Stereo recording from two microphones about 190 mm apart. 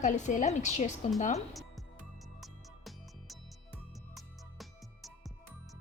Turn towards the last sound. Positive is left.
turn(degrees=0)  # may be behind; listen again after turning